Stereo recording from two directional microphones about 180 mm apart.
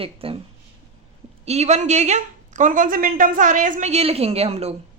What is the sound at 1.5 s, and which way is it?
Speech, 40° right (ahead or behind).